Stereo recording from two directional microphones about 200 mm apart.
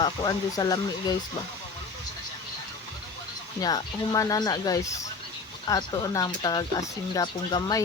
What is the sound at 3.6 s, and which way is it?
Speech, 20° left (ahead or behind).